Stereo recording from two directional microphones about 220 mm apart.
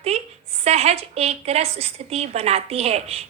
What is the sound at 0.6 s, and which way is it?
A woman's voice, 30° right (ahead or behind).